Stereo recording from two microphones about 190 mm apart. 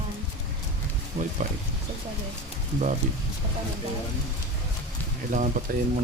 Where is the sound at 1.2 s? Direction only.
50° right (ahead or behind).